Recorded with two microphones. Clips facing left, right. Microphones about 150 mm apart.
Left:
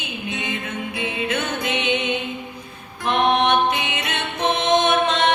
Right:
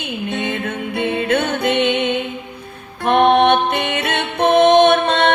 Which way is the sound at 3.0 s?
60° right (ahead or behind).